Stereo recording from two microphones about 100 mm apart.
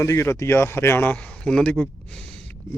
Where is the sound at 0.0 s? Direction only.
30° left (ahead or behind).